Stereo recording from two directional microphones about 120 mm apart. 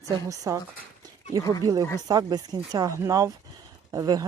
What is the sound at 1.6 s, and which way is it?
Speech, 30° right (ahead or behind).